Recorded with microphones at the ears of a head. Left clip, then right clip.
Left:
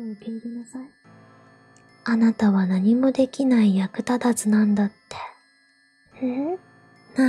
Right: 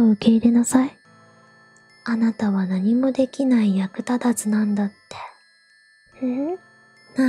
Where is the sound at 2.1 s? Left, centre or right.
Centre.